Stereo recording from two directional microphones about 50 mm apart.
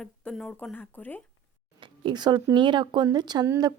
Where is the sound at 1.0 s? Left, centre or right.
Left.